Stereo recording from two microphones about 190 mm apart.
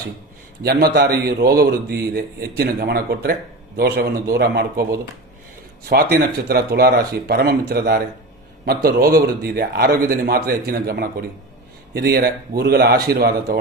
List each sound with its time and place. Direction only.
0.6 s a man's voice: 55° right (ahead or behind)